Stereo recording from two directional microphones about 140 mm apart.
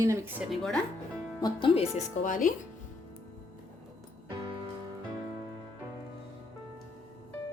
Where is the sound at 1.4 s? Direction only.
35° left (ahead or behind).